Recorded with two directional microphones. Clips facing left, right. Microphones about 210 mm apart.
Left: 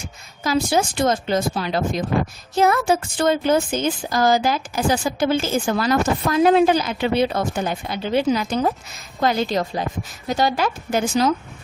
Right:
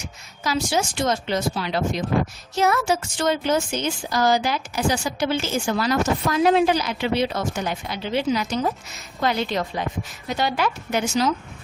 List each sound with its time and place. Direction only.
0.4 s a woman's voice: 55° left (ahead or behind)